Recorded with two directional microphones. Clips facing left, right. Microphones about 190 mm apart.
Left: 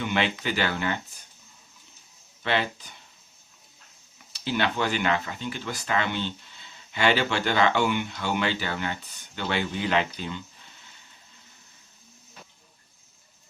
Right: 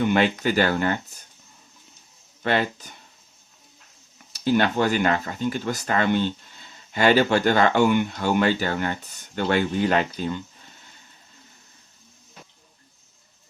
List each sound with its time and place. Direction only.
0.0 s speech: 45° right (ahead or behind)
2.4 s speech: 45° right (ahead or behind)
4.3 s speech: 45° right (ahead or behind)